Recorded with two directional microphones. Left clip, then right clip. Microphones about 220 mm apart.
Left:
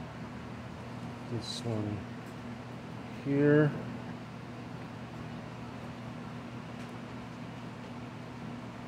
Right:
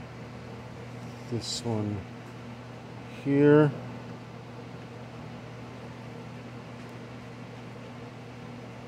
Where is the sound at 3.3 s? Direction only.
30° right (ahead or behind).